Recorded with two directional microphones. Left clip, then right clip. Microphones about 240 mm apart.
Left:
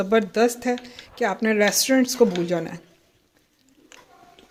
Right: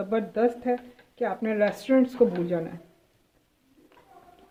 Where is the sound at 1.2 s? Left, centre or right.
Left.